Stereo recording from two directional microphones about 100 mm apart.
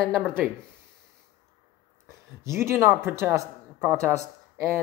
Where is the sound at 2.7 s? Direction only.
25° right (ahead or behind).